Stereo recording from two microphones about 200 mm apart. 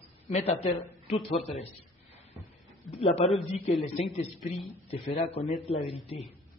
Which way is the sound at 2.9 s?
30° left (ahead or behind).